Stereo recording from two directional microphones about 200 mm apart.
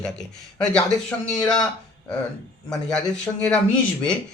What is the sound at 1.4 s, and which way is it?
Speech, 20° left (ahead or behind).